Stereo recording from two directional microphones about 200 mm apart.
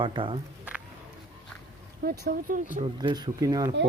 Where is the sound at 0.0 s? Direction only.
25° right (ahead or behind).